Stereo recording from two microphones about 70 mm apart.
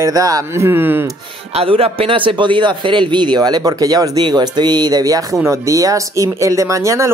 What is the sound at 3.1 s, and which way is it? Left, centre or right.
Speech, right.